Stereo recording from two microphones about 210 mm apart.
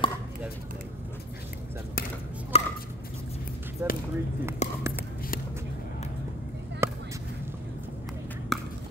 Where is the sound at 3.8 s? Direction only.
10° right (ahead or behind).